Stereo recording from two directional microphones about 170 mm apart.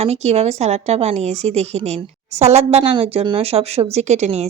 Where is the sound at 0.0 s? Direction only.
40° right (ahead or behind).